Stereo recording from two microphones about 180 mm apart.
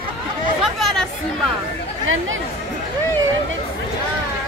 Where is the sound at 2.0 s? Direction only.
90° right.